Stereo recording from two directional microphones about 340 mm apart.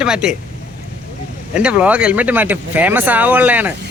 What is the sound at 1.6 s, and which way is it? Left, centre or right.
Speech, centre.